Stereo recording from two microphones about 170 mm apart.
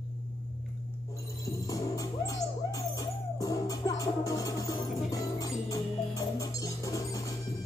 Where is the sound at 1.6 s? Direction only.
20° left (ahead or behind).